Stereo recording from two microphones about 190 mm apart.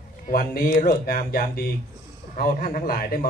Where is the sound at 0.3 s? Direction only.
50° left (ahead or behind).